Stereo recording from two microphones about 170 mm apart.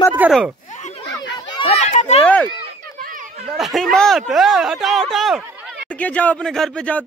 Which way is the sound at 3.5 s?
Centre (ahead or behind).